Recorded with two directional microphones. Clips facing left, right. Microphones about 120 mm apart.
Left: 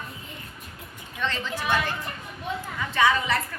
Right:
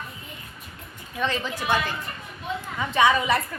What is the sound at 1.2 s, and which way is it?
Speech, 10° right (ahead or behind).